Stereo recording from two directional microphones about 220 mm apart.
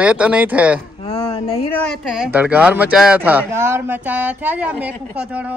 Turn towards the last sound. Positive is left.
turn(degrees=-5)  # may be behind; listen again after turning